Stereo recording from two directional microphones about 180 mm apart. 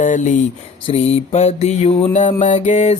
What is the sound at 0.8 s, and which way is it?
Mantra, 35° left (ahead or behind).